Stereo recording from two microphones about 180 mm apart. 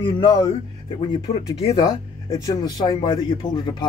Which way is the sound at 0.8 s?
30° left (ahead or behind).